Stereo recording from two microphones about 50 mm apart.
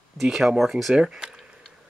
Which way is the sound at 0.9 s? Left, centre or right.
Centre.